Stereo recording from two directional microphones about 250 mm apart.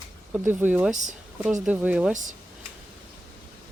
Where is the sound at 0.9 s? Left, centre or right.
Right.